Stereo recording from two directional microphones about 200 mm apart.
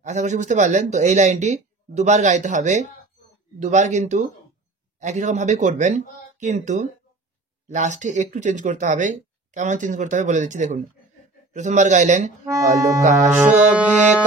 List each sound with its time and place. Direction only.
0.0 s speech: 35° right (ahead or behind)
12.4 s speech: 15° right (ahead or behind)
13.0 s speech: 35° right (ahead or behind)